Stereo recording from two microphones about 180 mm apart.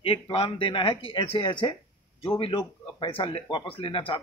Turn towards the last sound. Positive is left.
turn(degrees=30)  # may be behind; listen again after turning